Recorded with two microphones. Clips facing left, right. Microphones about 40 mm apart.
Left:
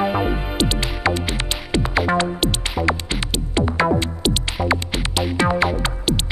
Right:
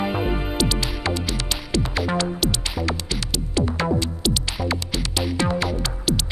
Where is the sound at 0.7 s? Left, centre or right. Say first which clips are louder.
Left 4 dB; left.